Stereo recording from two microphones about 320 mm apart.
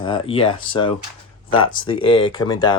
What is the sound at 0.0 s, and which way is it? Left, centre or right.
Speech, centre.